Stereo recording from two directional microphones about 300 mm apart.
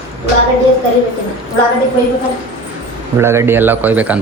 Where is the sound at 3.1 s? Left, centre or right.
Centre.